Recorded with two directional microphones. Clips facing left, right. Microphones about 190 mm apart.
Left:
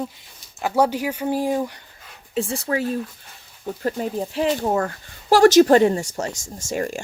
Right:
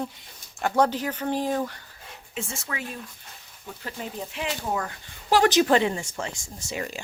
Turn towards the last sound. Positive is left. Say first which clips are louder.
# left 7 dB
turn(degrees=45)  # may be behind; listen again after turning